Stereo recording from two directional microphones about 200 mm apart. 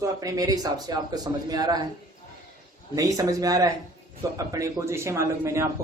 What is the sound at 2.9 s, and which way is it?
A man's voice, 15° right (ahead or behind).